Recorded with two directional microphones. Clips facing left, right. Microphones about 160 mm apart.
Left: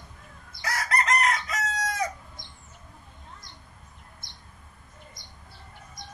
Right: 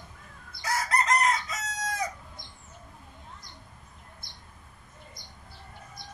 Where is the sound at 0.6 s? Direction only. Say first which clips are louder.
Even; 70° left (ahead or behind).